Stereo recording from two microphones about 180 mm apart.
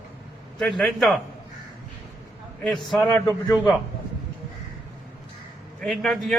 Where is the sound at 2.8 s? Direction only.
Centre (ahead or behind).